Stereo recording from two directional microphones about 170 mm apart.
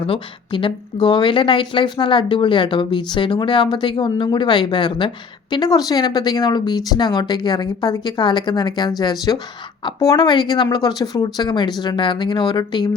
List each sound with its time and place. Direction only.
0.0 s speech: 30° left (ahead or behind)